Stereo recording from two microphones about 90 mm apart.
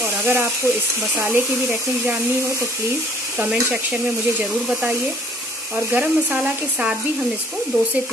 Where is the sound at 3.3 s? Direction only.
10° right (ahead or behind).